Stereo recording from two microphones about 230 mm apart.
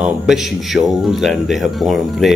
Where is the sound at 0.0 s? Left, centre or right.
Centre.